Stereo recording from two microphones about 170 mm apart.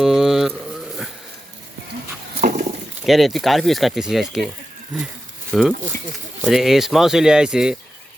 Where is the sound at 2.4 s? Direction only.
55° right (ahead or behind).